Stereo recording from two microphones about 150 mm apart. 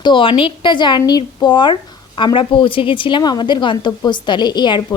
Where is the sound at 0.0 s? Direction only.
35° left (ahead or behind).